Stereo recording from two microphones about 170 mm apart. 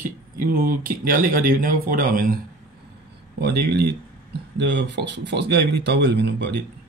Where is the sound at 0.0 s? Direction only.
55° right (ahead or behind).